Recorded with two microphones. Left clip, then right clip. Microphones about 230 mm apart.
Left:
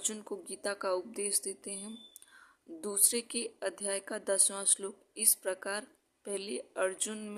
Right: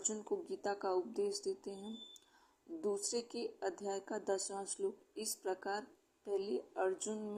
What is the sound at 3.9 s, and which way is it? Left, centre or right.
Speech, left.